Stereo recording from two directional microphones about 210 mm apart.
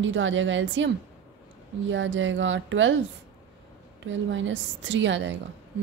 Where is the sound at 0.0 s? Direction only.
65° right (ahead or behind).